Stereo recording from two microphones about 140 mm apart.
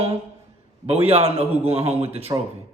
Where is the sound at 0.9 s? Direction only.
45° right (ahead or behind).